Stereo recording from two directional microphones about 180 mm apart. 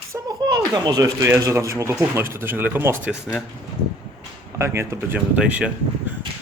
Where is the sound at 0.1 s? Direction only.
20° right (ahead or behind); by 3.4 s 5° right (ahead or behind).